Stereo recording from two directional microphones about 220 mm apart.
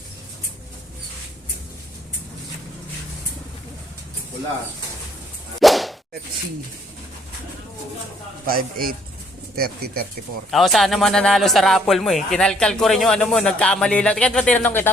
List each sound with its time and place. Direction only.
5.5 s whip: centre (ahead or behind)
8.4 s a man's voice: 40° right (ahead or behind)
10.5 s speech: centre (ahead or behind)